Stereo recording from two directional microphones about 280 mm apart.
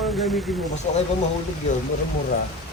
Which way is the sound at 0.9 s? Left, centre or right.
Left.